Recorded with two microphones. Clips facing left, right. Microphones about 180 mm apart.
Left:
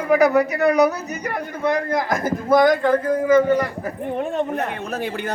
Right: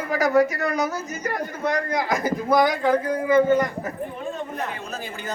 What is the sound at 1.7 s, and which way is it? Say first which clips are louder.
Speech: left 3 dB; 50° left (ahead or behind).